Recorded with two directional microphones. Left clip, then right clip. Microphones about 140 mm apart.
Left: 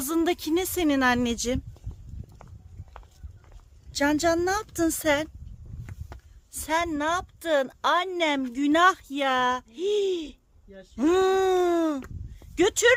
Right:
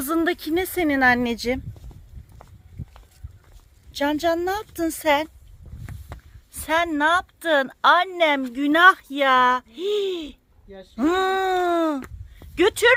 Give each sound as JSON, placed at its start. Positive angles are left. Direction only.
{"t": 0.0, "sound": "a woman's voice", "side_deg": 15}
{"t": 3.9, "sound": "a woman's voice", "side_deg": 10}
{"t": 6.6, "sound": "a woman's voice", "side_deg": 5}
{"t": 10.9, "sound": "a woman's voice", "side_deg": 10}
{"t": 12.5, "sound": "a woman's voice", "side_deg": 0}